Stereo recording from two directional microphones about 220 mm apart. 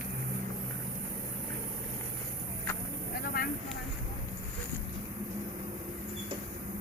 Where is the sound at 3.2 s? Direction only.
40° left (ahead or behind).